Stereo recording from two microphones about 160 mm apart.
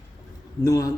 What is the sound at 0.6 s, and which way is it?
Speech, 20° left (ahead or behind).